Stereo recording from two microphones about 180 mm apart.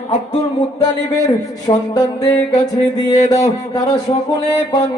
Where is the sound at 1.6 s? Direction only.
20° left (ahead or behind).